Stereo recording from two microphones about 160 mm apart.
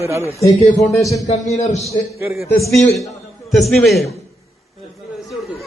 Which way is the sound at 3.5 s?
Centre (ahead or behind).